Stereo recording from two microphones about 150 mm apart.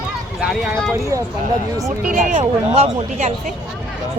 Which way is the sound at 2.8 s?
45° right (ahead or behind).